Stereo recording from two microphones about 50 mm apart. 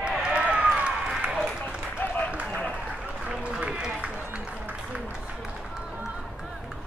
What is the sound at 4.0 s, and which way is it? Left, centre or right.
Music, right.